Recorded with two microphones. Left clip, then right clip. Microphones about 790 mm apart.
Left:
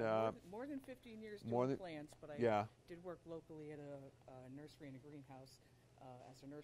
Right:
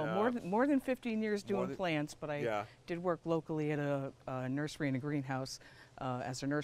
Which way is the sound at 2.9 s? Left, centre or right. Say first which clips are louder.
Right 17 dB; right.